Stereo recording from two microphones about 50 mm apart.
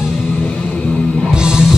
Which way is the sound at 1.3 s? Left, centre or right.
Centre.